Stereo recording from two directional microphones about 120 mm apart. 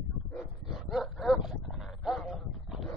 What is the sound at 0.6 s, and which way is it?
Dog, centre (ahead or behind).